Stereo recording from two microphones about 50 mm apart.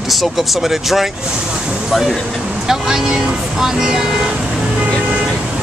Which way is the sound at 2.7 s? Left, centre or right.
Centre.